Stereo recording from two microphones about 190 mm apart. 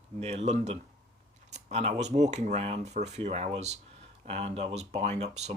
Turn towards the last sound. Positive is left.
turn(degrees=-35)  # may be behind; listen again after turning